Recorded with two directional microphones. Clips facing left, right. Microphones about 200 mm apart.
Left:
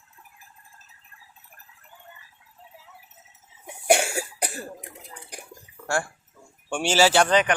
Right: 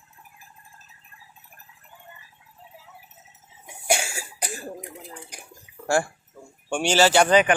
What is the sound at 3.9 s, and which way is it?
Cough, 60° left (ahead or behind).